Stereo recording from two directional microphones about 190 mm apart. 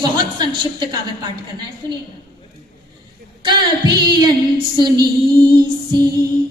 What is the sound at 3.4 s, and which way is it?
Music, 25° right (ahead or behind).